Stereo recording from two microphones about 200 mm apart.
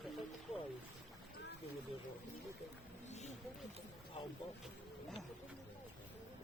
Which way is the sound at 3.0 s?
35° left (ahead or behind).